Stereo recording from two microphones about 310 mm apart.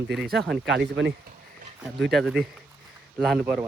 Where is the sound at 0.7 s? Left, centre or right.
Right.